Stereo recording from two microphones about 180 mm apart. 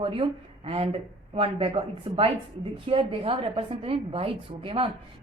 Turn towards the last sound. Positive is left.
turn(degrees=-30)  # may be behind; listen again after turning